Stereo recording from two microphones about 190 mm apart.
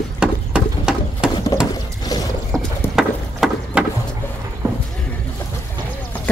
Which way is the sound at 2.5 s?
Centre (ahead or behind).